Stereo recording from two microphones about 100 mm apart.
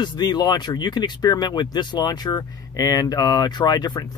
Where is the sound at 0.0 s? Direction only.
45° left (ahead or behind).